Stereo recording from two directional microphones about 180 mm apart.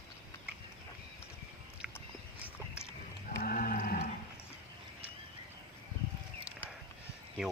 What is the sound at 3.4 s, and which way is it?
Sheep, 55° left (ahead or behind).